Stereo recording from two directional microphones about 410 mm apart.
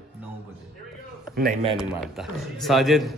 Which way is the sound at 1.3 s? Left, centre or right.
Right.